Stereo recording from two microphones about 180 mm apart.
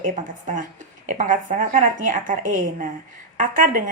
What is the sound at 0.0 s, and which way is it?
A woman's voice, 45° right (ahead or behind).